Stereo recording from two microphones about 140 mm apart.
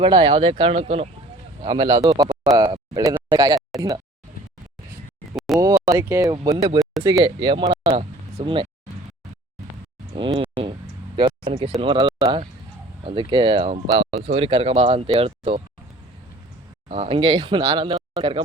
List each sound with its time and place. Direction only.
0.0 s speech: 35° right (ahead or behind)
1.6 s speech: 30° right (ahead or behind)
2.2 s speech: 5° right (ahead or behind)
2.6 s speech: 30° right (ahead or behind)
5.5 s speech: 25° right (ahead or behind)
10.2 s speech: 35° right (ahead or behind)
11.4 s speech: 40° right (ahead or behind)
16.9 s speech: 45° right (ahead or behind)